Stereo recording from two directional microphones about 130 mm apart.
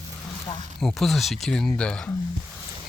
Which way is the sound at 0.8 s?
5° left (ahead or behind).